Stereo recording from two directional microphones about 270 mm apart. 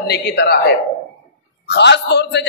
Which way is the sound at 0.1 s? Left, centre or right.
Left.